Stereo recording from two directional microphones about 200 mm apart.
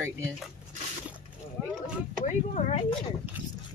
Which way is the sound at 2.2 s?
35° left (ahead or behind).